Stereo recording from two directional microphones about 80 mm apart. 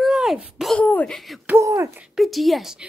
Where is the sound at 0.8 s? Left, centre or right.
Left.